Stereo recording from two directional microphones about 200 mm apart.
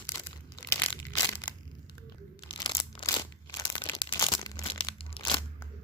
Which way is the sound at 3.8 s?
20° left (ahead or behind).